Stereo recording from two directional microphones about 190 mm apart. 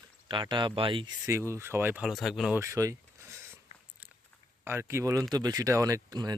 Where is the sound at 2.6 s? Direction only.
15° right (ahead or behind).